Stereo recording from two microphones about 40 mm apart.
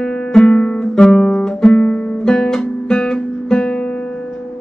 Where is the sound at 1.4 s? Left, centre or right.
Left.